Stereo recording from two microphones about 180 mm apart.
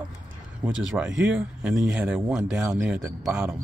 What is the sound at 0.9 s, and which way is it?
Speech, 5° right (ahead or behind).